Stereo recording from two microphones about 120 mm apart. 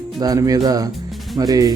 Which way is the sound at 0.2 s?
30° right (ahead or behind).